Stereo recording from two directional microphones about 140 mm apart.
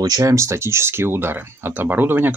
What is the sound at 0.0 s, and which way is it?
Speech, 25° right (ahead or behind).